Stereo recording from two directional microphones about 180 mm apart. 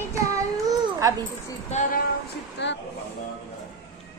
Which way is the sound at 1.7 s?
40° left (ahead or behind).